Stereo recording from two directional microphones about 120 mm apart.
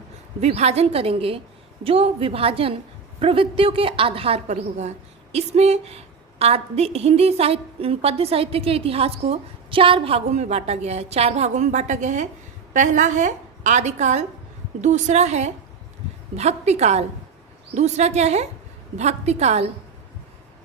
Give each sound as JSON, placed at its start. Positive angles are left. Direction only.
{"t": 0.4, "sound": "a woman's voice", "side_deg": -65}